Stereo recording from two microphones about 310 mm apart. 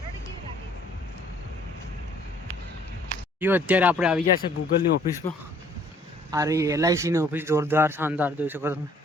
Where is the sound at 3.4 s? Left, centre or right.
Centre.